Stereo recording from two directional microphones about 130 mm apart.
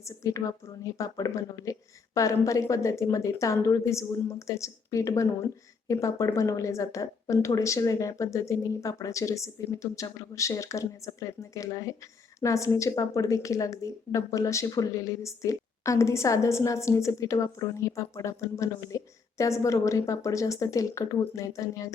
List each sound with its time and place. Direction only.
0.0 s a woman's voice: 25° left (ahead or behind)